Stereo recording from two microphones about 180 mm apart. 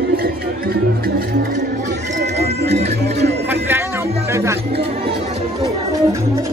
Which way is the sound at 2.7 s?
35° right (ahead or behind).